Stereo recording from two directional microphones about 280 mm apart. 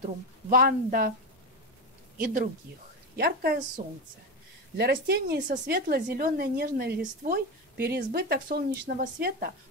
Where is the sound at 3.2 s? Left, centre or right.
Right.